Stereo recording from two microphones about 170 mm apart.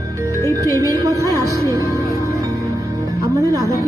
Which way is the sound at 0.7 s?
20° right (ahead or behind).